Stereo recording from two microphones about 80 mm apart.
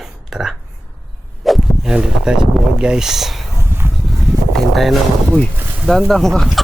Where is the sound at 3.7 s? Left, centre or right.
Right.